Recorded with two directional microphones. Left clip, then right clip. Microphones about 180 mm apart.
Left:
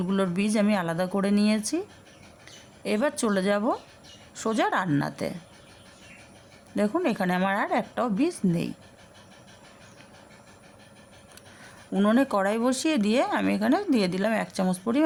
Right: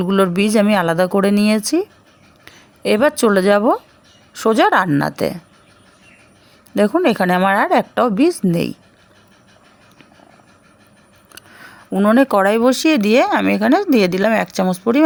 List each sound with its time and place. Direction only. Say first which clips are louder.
0.0 s speech: right 12 dB; 40° right (ahead or behind)
6.7 s speech: right 11 dB; 40° right (ahead or behind)
11.9 s speech: right 10 dB; 30° right (ahead or behind)